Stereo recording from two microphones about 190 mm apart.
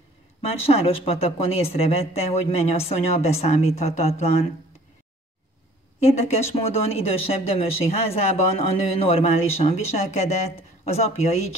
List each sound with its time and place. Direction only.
0.6 s speech: 30° left (ahead or behind)
6.0 s speech: 35° left (ahead or behind)